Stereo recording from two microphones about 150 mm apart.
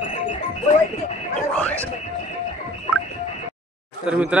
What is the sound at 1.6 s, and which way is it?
Speech, 10° left (ahead or behind).